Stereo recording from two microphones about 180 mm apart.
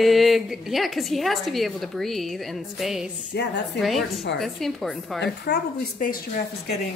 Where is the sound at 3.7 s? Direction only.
Centre (ahead or behind).